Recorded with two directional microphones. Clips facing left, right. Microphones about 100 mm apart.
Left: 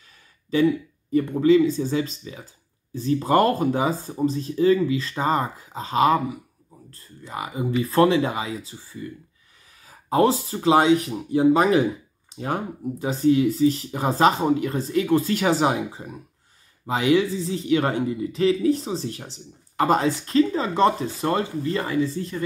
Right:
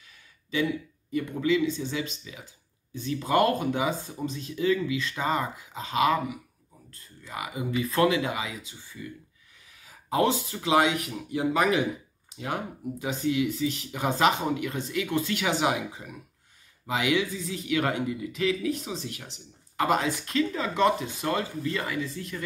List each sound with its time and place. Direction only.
0.5 s speech: 40° left (ahead or behind)